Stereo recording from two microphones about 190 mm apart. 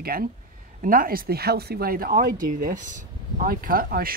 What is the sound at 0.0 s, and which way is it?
Speech, 50° right (ahead or behind).